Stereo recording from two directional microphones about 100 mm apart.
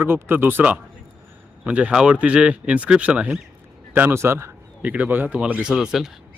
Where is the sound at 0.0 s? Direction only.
20° right (ahead or behind).